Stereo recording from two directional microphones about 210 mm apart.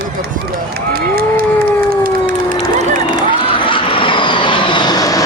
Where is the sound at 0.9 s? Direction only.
45° right (ahead or behind).